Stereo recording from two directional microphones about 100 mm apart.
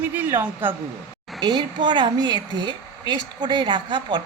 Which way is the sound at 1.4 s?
50° right (ahead or behind).